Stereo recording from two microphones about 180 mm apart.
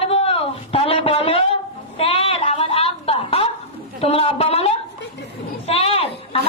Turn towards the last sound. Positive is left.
turn(degrees=30)  # may be behind; listen again after turning